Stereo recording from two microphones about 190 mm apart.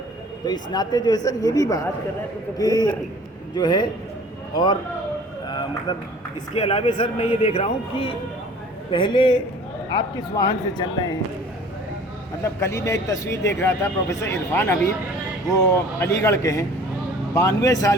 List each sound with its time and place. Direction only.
0.4 s speech: 20° left (ahead or behind)
6.5 s speech: 30° left (ahead or behind)
12.4 s speech: 15° left (ahead or behind)